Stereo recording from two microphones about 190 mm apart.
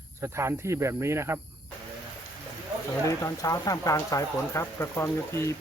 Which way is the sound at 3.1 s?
15° left (ahead or behind).